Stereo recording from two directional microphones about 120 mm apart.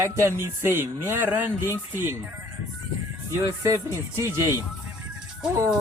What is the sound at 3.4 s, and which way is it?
Speech, 25° right (ahead or behind).